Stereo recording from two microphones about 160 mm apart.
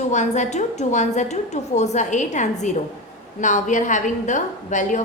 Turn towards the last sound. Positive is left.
turn(degrees=50)  # may be behind; listen again after turning